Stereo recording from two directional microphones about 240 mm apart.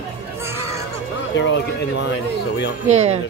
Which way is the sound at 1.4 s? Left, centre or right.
Left.